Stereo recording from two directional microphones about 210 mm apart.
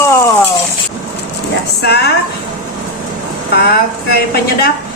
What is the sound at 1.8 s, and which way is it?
Speech, 50° left (ahead or behind).